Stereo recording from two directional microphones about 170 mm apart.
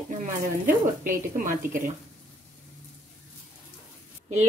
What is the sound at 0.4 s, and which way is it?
Speech, 50° right (ahead or behind).